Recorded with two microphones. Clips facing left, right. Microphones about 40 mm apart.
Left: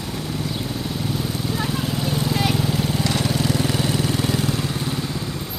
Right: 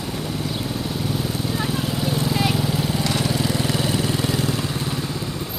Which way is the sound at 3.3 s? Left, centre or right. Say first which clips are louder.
Left 1 dB; centre.